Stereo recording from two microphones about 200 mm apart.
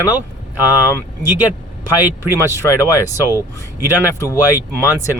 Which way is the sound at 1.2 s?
10° right (ahead or behind).